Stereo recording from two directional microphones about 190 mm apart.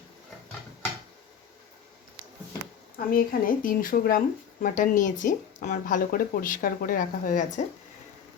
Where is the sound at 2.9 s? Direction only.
50° left (ahead or behind).